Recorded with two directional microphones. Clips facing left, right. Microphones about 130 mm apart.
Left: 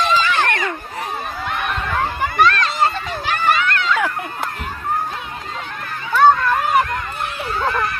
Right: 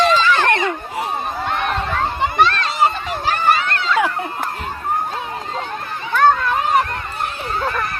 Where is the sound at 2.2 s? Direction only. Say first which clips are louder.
Left 1 dB; 25° right (ahead or behind).